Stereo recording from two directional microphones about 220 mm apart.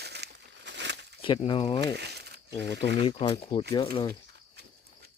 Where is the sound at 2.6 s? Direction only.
50° right (ahead or behind).